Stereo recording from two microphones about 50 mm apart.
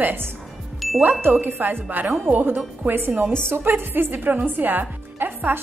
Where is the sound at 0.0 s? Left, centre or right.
Right.